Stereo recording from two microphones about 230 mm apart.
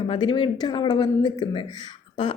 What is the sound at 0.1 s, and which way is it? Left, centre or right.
Speech, left.